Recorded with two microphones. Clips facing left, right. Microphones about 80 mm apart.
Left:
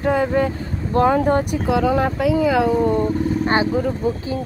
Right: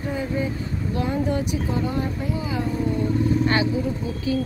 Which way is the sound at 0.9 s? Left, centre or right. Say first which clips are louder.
Left 10 dB; left.